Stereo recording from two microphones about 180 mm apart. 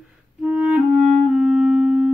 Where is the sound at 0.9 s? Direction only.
40° right (ahead or behind).